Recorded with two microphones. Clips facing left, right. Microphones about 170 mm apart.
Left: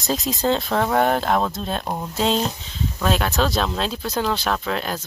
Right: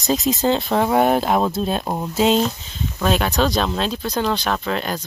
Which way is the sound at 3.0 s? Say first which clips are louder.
Right 2 dB; centre (ahead or behind).